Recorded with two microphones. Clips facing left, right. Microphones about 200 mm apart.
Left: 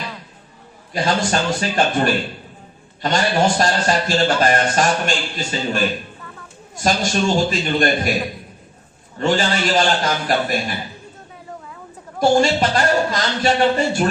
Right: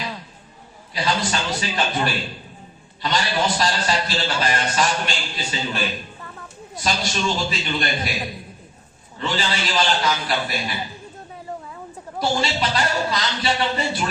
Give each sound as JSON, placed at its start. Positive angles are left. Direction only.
{"t": 0.9, "sound": "a man's voice", "side_deg": 50}
{"t": 12.2, "sound": "a man's voice", "side_deg": 50}